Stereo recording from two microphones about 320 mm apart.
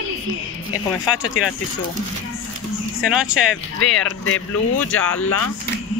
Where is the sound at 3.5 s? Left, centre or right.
Left.